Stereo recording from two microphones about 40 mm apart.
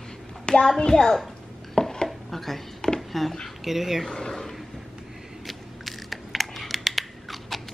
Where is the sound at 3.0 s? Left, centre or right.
Centre.